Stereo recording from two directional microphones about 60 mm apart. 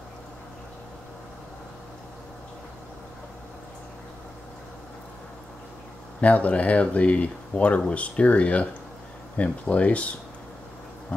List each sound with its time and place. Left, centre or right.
6.2 s speech: left